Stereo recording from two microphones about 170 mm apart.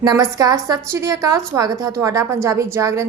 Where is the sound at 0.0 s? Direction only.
20° right (ahead or behind).